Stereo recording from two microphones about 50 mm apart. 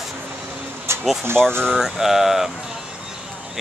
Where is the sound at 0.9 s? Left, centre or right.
Right.